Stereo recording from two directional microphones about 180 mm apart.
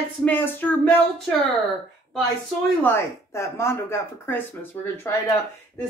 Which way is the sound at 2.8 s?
15° left (ahead or behind).